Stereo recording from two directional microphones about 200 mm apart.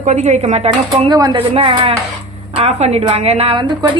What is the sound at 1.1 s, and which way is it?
A woman's voice, 20° right (ahead or behind).